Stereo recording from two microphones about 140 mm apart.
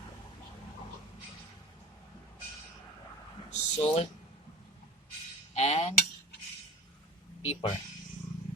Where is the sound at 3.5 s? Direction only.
50° left (ahead or behind).